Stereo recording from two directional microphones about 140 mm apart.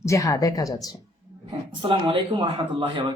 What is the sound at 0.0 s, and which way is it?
Speech, 25° left (ahead or behind).